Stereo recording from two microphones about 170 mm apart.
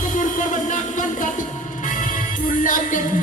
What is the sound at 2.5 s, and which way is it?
Music, 50° left (ahead or behind).